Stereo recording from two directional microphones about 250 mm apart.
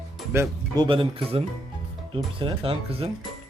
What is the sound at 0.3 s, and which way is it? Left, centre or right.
Speech, centre.